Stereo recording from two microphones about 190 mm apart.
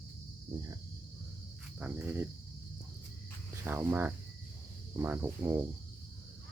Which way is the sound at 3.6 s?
10° right (ahead or behind).